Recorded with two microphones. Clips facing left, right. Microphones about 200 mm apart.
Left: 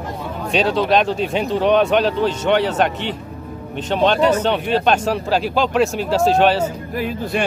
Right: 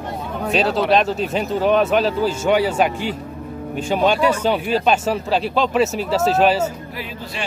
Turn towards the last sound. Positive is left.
turn(degrees=50)  # may be behind; listen again after turning